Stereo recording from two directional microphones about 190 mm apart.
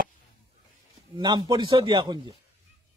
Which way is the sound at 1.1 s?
20° right (ahead or behind).